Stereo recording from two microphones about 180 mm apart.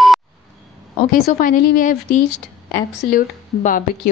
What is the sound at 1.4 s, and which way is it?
A woman's voice, 50° left (ahead or behind).